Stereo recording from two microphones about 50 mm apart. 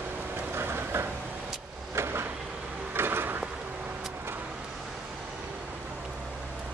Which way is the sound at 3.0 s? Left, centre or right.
Right.